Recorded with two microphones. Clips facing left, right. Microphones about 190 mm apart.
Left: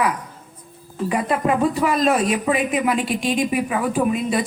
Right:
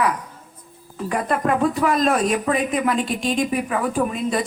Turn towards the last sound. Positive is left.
turn(degrees=10)  # may be behind; listen again after turning